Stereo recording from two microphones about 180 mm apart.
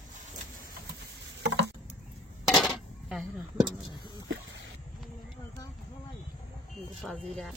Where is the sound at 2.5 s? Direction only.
Centre (ahead or behind).